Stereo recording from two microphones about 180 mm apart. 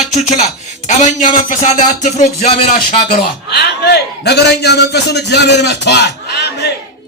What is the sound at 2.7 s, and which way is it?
A man's voice, 50° left (ahead or behind).